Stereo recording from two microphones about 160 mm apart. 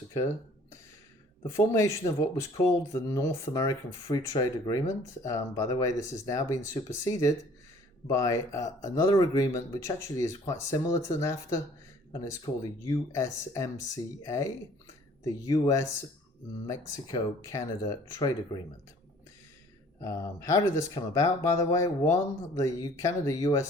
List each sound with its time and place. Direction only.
1.5 s speech: 20° left (ahead or behind)
12.5 s speech: 40° left (ahead or behind)
12.8 s speech: 20° left (ahead or behind)
20.0 s speech: 20° left (ahead or behind)